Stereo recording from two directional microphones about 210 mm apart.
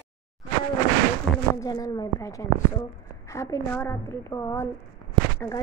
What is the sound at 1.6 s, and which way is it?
A woman's voice, 15° left (ahead or behind).